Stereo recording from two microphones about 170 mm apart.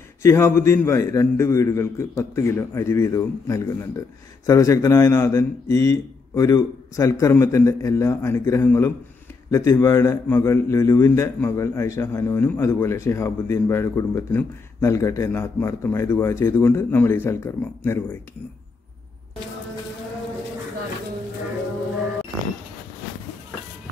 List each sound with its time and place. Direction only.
0.2 s a man's voice: 15° left (ahead or behind)